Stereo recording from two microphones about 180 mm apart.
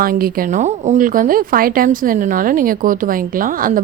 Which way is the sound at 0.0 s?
55° right (ahead or behind).